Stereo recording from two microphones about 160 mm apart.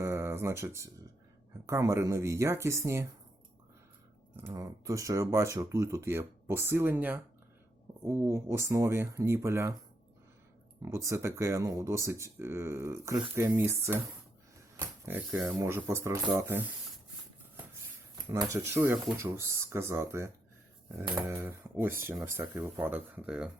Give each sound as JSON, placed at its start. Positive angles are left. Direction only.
{"t": 0.0, "sound": "a sound", "side_deg": -15}
{"t": 1.6, "sound": "speech", "side_deg": -20}
{"t": 4.4, "sound": "speech", "side_deg": -15}
{"t": 10.8, "sound": "speech", "side_deg": -15}
{"t": 18.3, "sound": "speech", "side_deg": -20}